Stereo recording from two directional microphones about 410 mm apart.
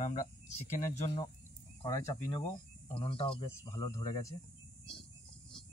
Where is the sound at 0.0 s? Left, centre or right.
Centre.